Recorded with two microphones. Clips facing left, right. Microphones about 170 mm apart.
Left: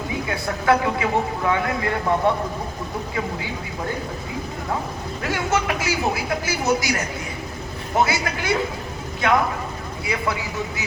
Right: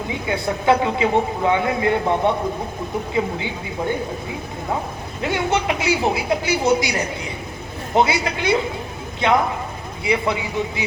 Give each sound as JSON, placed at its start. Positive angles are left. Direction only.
{"t": 0.1, "sound": "speech", "side_deg": -20}
{"t": 5.2, "sound": "speech", "side_deg": -25}
{"t": 10.0, "sound": "speech", "side_deg": -20}